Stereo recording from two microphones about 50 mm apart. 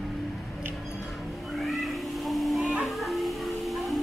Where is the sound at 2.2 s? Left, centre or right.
Centre.